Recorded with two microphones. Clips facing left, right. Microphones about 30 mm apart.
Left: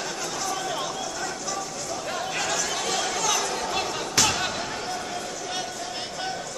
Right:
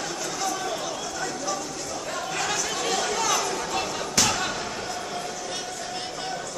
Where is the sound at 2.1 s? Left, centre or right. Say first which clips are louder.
Even; centre.